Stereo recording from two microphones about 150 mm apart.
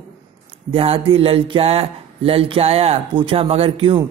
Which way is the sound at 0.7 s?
40° right (ahead or behind).